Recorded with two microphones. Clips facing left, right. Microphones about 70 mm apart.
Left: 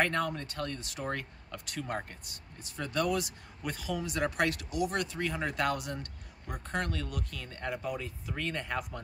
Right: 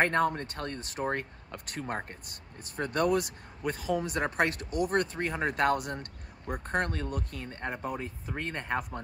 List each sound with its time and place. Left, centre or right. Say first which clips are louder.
0.0 s speech: right 4 dB; right
2.6 s speech: right 3 dB; right
3.6 s speech: right 5 dB; right